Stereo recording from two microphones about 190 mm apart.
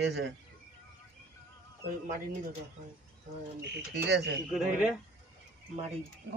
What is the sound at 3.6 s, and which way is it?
Speech, 65° right (ahead or behind).